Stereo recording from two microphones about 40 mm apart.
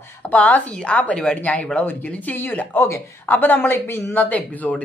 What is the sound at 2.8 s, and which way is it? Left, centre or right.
A woman's voice, left.